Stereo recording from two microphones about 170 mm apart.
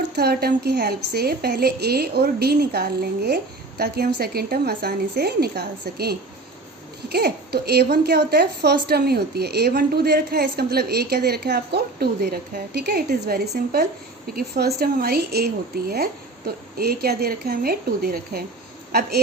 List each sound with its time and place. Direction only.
0.2 s a woman's voice: 70° right (ahead or behind)